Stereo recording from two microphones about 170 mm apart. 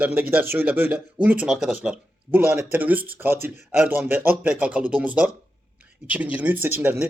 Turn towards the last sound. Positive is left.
turn(degrees=-10)  # may be behind; listen again after turning